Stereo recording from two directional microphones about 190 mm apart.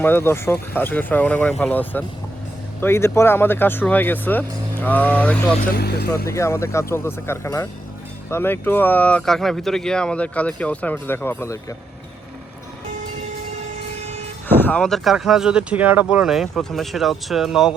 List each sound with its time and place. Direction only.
0.0 s speech: 10° left (ahead or behind)
5.5 s speech: 55° left (ahead or behind)
6.2 s speech: 15° left (ahead or behind)
14.0 s vehicle: 35° right (ahead or behind)
14.4 s speech: 10° left (ahead or behind)